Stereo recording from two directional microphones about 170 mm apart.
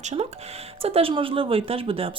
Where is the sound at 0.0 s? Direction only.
45° right (ahead or behind).